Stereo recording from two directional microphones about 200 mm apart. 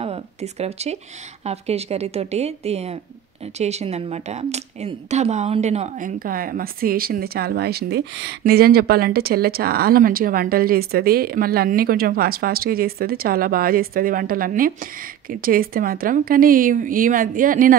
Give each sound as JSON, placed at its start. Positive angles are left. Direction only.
{"t": 0.0, "sound": "a woman's voice", "side_deg": -30}